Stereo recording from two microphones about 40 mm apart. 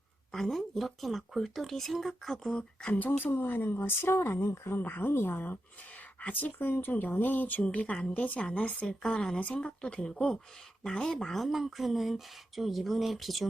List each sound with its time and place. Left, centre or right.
0.3 s speech: centre
2.5 s speech: left
2.9 s speech: left
3.3 s speech: left
4.8 s speech: left
6.2 s speech: left
6.6 s speech: left
7.6 s speech: left; by 11.3 s centre
11.3 s speech: centre